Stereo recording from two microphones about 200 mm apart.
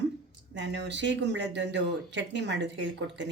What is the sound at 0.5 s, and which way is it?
Speech, 60° right (ahead or behind).